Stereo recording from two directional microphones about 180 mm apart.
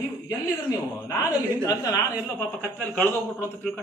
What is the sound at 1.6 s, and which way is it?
A man's voice, 20° left (ahead or behind).